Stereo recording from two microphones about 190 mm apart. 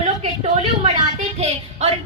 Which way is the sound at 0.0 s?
30° right (ahead or behind).